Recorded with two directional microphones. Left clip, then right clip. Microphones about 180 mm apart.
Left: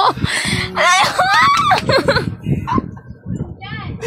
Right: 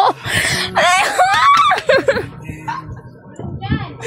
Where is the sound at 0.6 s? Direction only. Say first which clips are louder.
Left 1 dB; 20° right (ahead or behind).